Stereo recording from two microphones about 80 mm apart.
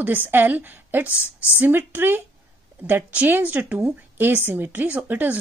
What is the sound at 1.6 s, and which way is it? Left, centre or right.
A woman's voice, right.